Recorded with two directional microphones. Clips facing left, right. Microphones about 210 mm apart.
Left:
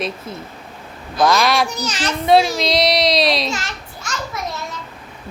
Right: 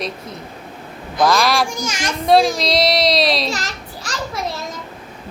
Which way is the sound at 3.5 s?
35° right (ahead or behind).